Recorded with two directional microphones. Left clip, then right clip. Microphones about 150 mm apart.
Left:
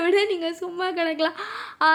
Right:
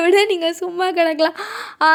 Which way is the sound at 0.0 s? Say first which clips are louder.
Right 7 dB; 50° right (ahead or behind).